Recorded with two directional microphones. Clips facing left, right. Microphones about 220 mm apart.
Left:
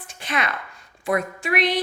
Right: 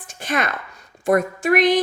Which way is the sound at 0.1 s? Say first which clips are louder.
Right 4 dB; 45° right (ahead or behind).